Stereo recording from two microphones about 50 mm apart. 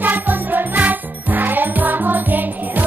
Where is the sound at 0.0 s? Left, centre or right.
Right.